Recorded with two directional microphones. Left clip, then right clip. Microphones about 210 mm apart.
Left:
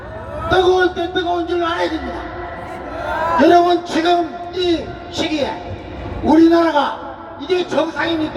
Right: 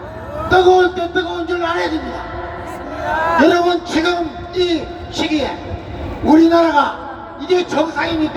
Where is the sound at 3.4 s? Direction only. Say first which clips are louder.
Left 3 dB; 10° right (ahead or behind).